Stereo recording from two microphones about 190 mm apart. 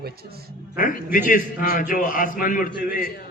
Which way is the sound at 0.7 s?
45° left (ahead or behind).